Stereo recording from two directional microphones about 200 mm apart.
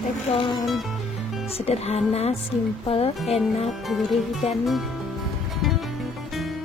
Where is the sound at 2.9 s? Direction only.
30° left (ahead or behind).